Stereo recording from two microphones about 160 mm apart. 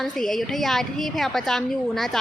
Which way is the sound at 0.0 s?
Centre (ahead or behind).